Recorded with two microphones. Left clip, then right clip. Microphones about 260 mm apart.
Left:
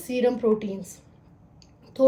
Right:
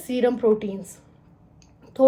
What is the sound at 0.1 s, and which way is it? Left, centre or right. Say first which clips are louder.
Speech: right 2 dB; centre.